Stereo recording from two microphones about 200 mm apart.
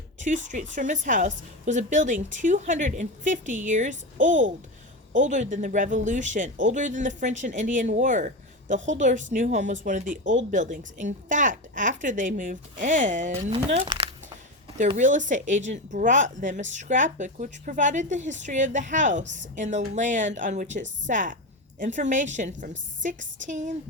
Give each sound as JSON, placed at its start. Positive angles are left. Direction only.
{"t": 0.4, "sound": "speech", "side_deg": -40}
{"t": 4.3, "sound": "speech", "side_deg": -70}
{"t": 5.1, "sound": "speech", "side_deg": -40}
{"t": 14.8, "sound": "speech", "side_deg": -35}
{"t": 19.2, "sound": "speech", "side_deg": -65}
{"t": 19.5, "sound": "speech", "side_deg": -35}